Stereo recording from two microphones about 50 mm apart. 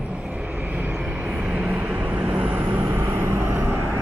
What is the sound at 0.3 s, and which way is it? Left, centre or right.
Vehicle, right.